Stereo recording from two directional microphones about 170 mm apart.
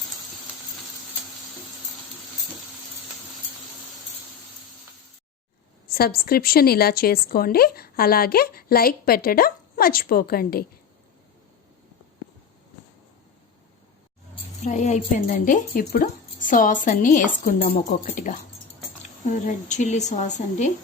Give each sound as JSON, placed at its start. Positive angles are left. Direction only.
{"t": 5.9, "sound": "a woman's voice", "side_deg": 65}
{"t": 14.6, "sound": "speech", "side_deg": 45}
{"t": 17.6, "sound": "speech", "side_deg": 40}
{"t": 18.0, "sound": "speech", "side_deg": 50}